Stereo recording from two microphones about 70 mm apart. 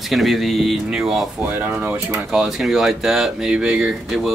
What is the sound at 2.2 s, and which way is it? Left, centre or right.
Speech, centre.